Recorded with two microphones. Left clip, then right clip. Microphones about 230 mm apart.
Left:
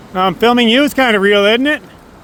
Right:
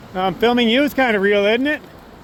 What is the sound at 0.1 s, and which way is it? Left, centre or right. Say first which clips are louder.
Speech: left 5 dB; left.